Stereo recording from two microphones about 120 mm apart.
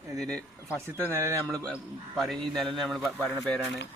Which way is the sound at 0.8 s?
25° right (ahead or behind).